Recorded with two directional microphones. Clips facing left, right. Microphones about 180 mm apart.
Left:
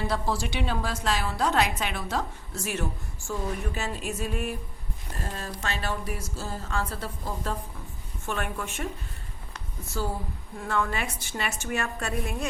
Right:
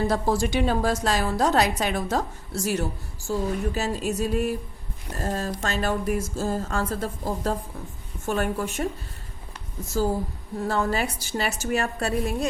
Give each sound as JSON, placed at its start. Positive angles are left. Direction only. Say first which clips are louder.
{"t": 0.1, "sound": "a woman's voice", "louder": "right 6 dB", "side_deg": -45}
{"t": 10.6, "sound": "a woman's voice", "louder": "right 4 dB", "side_deg": -35}